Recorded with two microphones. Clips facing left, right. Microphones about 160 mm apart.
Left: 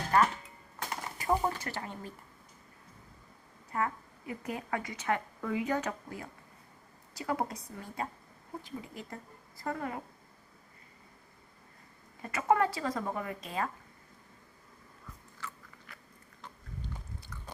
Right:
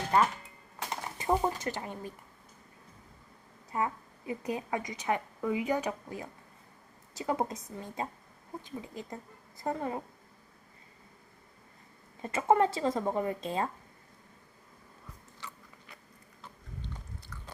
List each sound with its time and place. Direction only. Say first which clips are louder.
0.9 s speech: right 1 dB; 20° right (ahead or behind)
3.7 s a woman's voice: right 1 dB; 20° right (ahead or behind)
12.2 s speech: right 2 dB; 25° right (ahead or behind)
15.4 s biting: left 3 dB; 20° right (ahead or behind)